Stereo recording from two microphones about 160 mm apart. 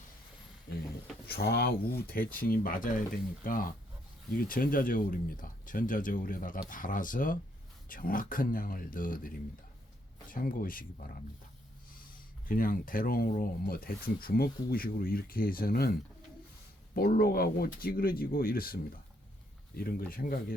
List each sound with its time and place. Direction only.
1.3 s speech: 75° left (ahead or behind)
12.5 s speech: 60° left (ahead or behind)
16.9 s speech: 70° left (ahead or behind)